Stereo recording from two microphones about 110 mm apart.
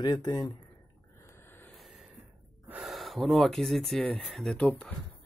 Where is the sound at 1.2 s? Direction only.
20° left (ahead or behind).